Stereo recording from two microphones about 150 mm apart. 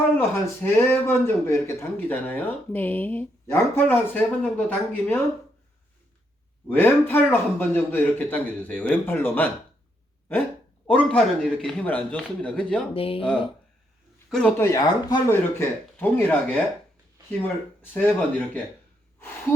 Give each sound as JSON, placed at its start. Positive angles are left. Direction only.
{"t": 0.2, "sound": "speech", "side_deg": 15}
{"t": 6.7, "sound": "speech", "side_deg": 15}
{"t": 10.8, "sound": "speech", "side_deg": 10}
{"t": 12.9, "sound": "speech", "side_deg": 40}
{"t": 14.3, "sound": "speech", "side_deg": 5}
{"t": 14.6, "sound": "speech", "side_deg": 20}
{"t": 17.9, "sound": "speech", "side_deg": 10}